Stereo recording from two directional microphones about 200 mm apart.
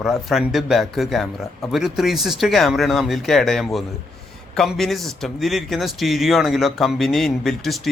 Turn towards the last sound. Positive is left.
turn(degrees=0)  # may be behind; listen again after turning